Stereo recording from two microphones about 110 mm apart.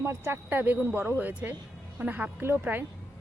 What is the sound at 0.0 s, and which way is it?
Speech, 20° right (ahead or behind).